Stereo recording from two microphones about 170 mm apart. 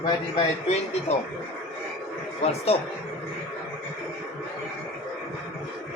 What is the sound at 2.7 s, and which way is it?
Speech, 35° left (ahead or behind).